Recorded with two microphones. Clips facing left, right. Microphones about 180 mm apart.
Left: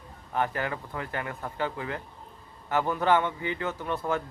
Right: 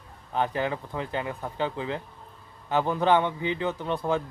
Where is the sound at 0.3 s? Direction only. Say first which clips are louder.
Right 2 dB; 20° right (ahead or behind).